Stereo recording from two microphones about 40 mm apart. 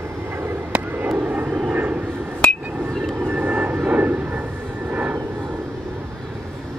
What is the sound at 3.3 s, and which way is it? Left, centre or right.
Vehicle, right.